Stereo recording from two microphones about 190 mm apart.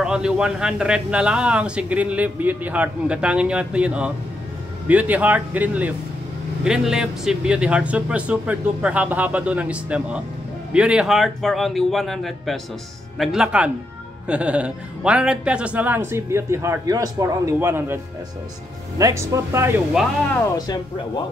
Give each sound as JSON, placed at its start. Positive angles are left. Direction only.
{"t": 0.0, "sound": "a man's voice", "side_deg": -5}
{"t": 18.9, "sound": "speech", "side_deg": -15}
{"t": 20.0, "sound": "a man's voice", "side_deg": 0}
{"t": 20.3, "sound": "speech", "side_deg": 20}